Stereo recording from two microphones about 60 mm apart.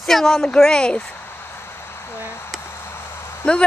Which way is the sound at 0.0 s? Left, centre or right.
Centre.